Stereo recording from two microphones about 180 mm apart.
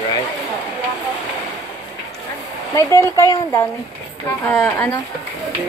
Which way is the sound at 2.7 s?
15° left (ahead or behind).